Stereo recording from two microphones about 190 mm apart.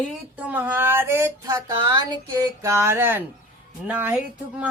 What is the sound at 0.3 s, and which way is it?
Speech, 10° right (ahead or behind).